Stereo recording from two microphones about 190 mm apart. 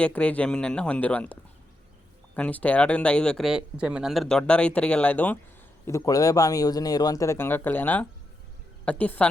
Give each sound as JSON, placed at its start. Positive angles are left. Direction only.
{"t": 0.0, "sound": "a woman's voice", "side_deg": 5}